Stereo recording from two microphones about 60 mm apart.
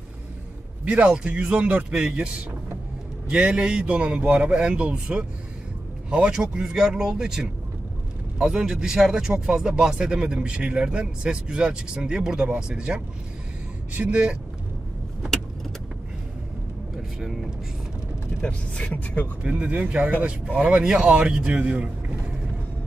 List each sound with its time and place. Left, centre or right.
1.0 s speech: centre
3.3 s speech: centre
16.9 s vehicle: centre
18.4 s speech: centre
19.4 s speech: centre
20.6 s speech: centre